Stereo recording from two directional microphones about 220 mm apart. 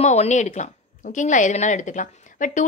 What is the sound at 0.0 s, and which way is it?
A woman's voice, 30° left (ahead or behind).